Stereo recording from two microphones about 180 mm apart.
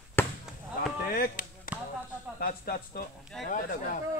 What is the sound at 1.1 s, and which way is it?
Chop, 55° left (ahead or behind).